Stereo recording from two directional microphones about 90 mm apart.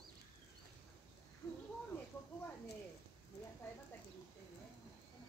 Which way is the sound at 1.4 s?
35° left (ahead or behind).